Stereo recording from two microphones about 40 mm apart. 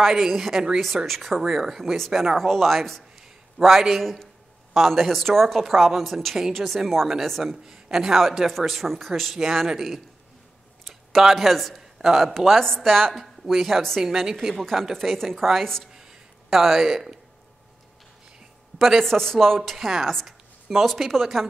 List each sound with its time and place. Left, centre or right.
0.0 s a woman's voice: centre
4.0 s a woman's voice: centre
7.6 s a man's voice: centre
10.9 s a sound: centre
11.2 s a woman's voice: centre
12.4 s a woman's voice: centre
15.9 s a sound: centre
18.8 s a man's voice: centre
19.0 s speech: centre
19.8 s a woman's voice: centre